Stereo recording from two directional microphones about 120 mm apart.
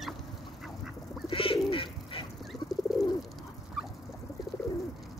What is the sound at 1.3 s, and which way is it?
Bird, 50° left (ahead or behind).